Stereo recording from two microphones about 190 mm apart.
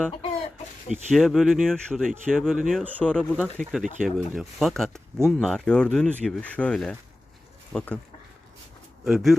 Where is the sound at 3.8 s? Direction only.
45° right (ahead or behind).